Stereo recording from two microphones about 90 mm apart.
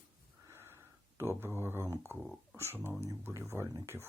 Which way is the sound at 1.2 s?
25° right (ahead or behind).